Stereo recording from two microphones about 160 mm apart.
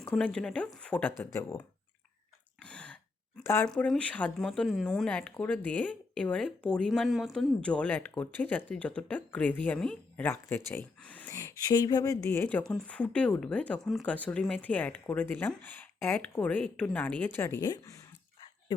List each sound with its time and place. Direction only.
0.0 s speech: 5° left (ahead or behind)
2.6 s throat clearing: 5° left (ahead or behind)
3.4 s speech: 15° left (ahead or behind)
3.7 s speech: 5° left (ahead or behind)